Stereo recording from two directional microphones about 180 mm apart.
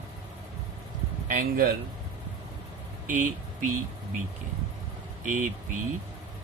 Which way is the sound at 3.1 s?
45° right (ahead or behind).